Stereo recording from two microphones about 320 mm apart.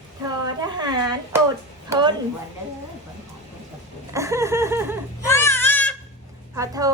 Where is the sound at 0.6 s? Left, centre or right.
Centre.